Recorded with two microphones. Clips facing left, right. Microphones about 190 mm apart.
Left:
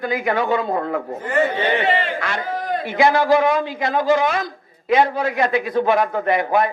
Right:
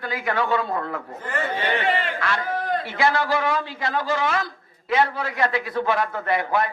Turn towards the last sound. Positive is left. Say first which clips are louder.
# left 5 dB
turn(degrees=15)  # may be behind; listen again after turning